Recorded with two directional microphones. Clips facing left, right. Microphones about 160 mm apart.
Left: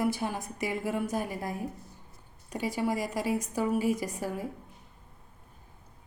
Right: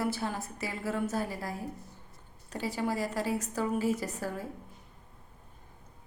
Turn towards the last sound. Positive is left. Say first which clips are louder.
# left 2 dB
turn(degrees=15)  # may be behind; listen again after turning